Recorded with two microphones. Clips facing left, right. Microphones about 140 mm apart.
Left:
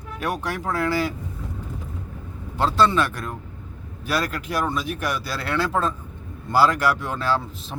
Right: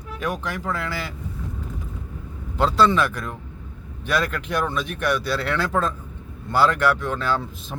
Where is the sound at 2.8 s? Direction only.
Centre (ahead or behind).